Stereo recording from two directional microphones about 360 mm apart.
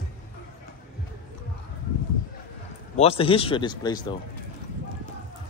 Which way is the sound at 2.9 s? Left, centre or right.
Centre.